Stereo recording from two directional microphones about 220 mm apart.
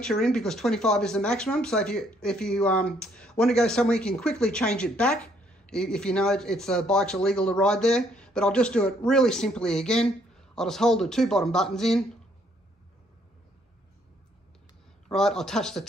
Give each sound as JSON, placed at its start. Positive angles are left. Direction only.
{"t": 0.0, "sound": "speech", "side_deg": 5}
{"t": 15.0, "sound": "speech", "side_deg": 0}